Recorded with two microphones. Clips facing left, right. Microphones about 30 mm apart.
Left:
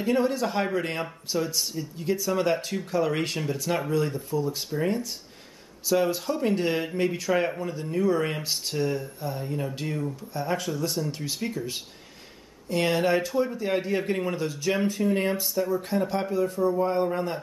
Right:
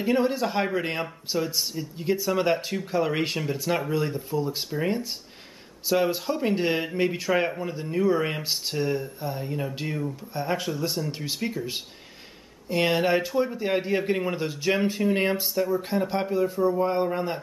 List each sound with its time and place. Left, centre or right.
0.0 s speech: centre
14.3 s speech: right